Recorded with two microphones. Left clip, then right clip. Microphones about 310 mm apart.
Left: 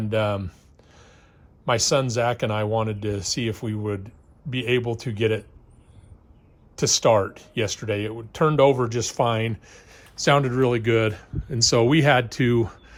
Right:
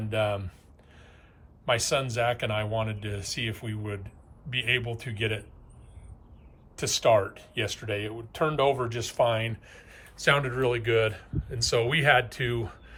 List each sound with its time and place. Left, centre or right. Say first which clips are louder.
0.1 s speech: left 4 dB; centre
1.6 s speech: left 5 dB; centre
6.7 s speech: left 4 dB; left